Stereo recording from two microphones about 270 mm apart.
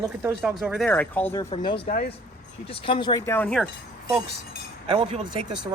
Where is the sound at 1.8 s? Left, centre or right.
Left; by 3.6 s centre.